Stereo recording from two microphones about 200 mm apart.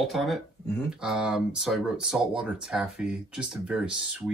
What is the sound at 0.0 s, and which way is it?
Speech, centre (ahead or behind).